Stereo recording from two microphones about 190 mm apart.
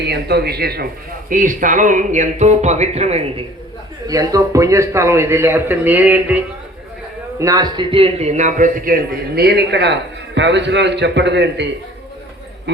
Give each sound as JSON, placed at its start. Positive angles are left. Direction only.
{"t": 0.0, "sound": "a man's voice", "side_deg": -60}
{"t": 1.3, "sound": "speech", "side_deg": -45}
{"t": 4.0, "sound": "a man's voice", "side_deg": -20}
{"t": 7.3, "sound": "a man's voice", "side_deg": -20}